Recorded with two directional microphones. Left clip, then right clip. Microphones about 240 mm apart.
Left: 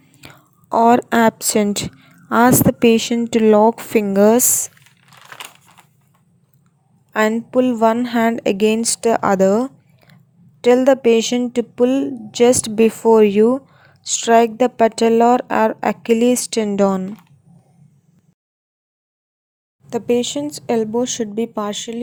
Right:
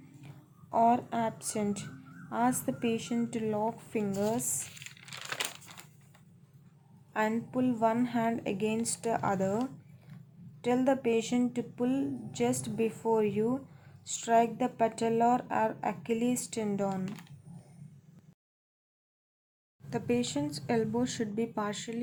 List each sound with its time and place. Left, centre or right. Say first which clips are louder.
0.0 s a woman's voice: left 13 dB; left
7.1 s speech: left 14 dB; left
19.9 s speech: left 14 dB; left